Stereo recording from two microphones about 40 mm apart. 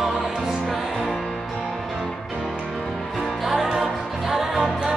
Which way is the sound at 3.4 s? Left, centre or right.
Centre.